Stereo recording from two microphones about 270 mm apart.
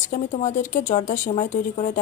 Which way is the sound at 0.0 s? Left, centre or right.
Left.